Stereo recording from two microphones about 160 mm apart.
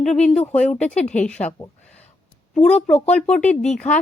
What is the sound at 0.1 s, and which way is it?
Speech, 45° left (ahead or behind).